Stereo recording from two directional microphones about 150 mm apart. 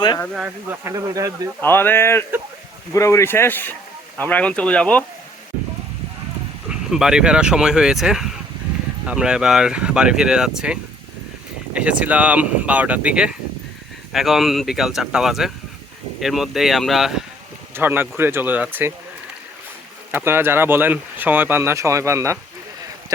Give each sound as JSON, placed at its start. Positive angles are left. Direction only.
{"t": 0.3, "sound": "speech", "side_deg": -10}
{"t": 1.6, "sound": "speech", "side_deg": 15}
{"t": 6.7, "sound": "speech", "side_deg": -5}
{"t": 17.7, "sound": "speech", "side_deg": -15}
{"t": 20.1, "sound": "speech", "side_deg": -15}